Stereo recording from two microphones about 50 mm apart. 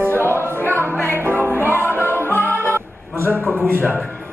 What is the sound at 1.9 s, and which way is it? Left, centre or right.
Music, right.